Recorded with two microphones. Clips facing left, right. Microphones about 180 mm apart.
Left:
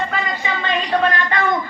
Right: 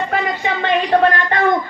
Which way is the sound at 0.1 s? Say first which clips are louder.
Right 4 dB; 60° right (ahead or behind).